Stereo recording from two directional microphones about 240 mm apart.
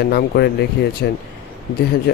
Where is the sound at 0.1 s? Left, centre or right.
Left.